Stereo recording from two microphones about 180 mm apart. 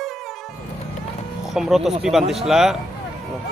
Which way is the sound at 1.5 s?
Centre (ahead or behind).